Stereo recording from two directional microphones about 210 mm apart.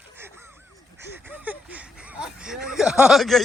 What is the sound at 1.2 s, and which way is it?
Speech, 10° right (ahead or behind).